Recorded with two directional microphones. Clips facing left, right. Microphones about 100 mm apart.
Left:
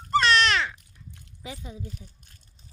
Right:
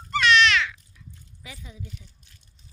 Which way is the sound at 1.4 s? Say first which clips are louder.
Left 4 dB; 25° left (ahead or behind).